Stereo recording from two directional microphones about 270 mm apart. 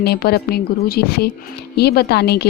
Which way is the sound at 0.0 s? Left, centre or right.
Left.